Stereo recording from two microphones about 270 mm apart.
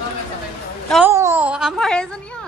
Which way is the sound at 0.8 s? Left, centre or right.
Centre.